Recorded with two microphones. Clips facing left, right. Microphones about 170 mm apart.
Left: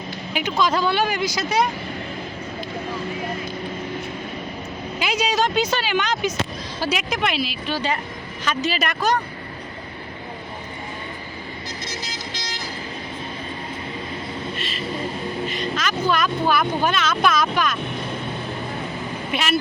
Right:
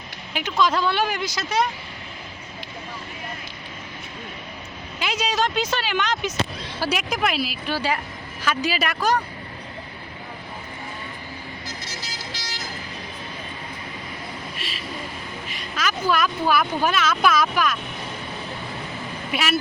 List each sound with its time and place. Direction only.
0.7 s speech: 5° left (ahead or behind)
4.9 s speech: 5° left (ahead or behind)
12.0 s vehicle: 20° left (ahead or behind)
14.5 s vehicle: 5° right (ahead or behind)
15.4 s speech: 5° right (ahead or behind)
19.3 s speech: 5° right (ahead or behind)